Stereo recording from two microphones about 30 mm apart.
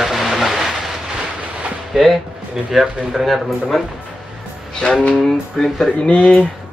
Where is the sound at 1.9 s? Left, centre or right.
Centre.